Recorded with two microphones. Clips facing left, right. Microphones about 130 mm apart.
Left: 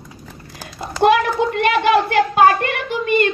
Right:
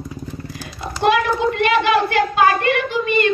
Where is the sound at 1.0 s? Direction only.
50° left (ahead or behind).